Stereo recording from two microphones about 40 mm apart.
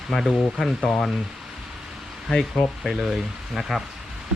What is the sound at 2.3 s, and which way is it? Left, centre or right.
Speech, centre.